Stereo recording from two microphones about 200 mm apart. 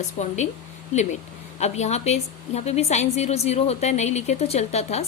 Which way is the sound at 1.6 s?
35° left (ahead or behind).